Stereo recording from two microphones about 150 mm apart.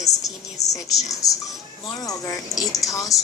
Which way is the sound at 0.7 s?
20° left (ahead or behind).